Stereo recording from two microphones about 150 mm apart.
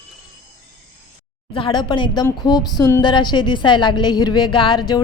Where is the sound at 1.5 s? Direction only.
35° left (ahead or behind).